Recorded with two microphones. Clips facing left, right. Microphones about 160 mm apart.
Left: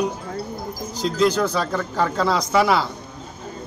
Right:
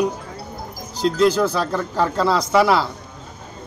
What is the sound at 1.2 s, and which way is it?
Speech, 5° right (ahead or behind).